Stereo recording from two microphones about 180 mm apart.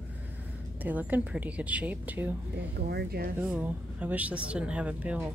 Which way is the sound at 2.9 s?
60° right (ahead or behind).